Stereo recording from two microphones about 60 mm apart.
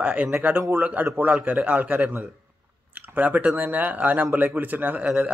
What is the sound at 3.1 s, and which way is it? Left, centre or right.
A man's voice, right.